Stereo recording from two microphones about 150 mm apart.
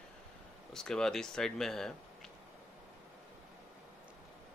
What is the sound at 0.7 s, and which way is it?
Speech, 5° left (ahead or behind).